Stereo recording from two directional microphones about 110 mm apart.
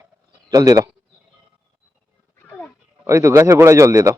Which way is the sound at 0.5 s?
30° right (ahead or behind).